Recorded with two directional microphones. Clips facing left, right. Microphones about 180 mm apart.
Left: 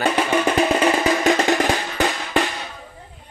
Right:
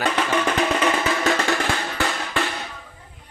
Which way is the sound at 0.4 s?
30° left (ahead or behind).